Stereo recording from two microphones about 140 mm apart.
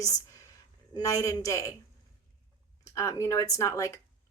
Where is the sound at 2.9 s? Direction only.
20° left (ahead or behind).